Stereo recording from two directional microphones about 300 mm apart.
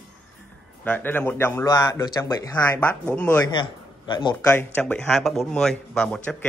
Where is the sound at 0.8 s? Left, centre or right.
Centre.